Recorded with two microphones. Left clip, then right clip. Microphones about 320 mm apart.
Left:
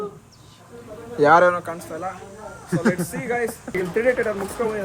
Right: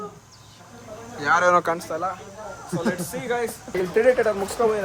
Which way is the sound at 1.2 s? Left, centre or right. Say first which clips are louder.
Left 5 dB; centre.